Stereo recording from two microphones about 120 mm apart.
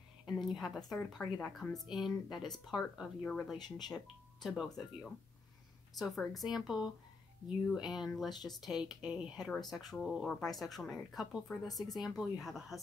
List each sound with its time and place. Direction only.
0.4 s a woman's voice: centre (ahead or behind)
5.9 s speech: centre (ahead or behind)